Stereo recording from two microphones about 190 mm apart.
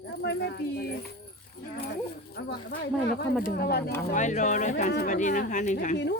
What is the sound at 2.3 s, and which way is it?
Speech, 55° left (ahead or behind).